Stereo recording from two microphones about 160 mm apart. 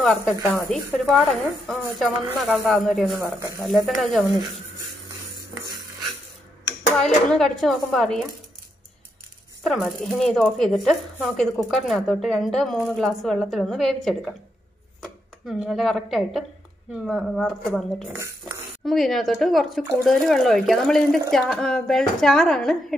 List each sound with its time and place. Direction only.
0.0 s speech: centre (ahead or behind)
7.0 s speech: 5° left (ahead or behind)
9.6 s speech: centre (ahead or behind)
18.1 s speech: 15° right (ahead or behind)
18.9 s speech: centre (ahead or behind)